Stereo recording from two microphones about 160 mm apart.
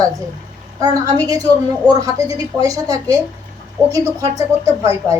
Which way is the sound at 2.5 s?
20° right (ahead or behind).